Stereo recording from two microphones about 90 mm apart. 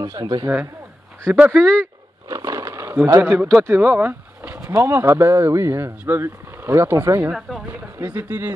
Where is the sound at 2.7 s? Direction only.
25° right (ahead or behind).